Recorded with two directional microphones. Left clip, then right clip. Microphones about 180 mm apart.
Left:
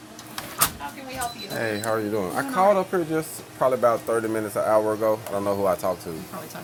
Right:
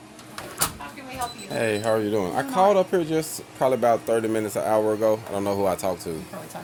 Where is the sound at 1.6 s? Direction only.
40° right (ahead or behind).